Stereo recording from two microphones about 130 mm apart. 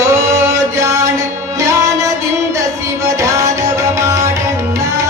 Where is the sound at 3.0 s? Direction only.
25° right (ahead or behind).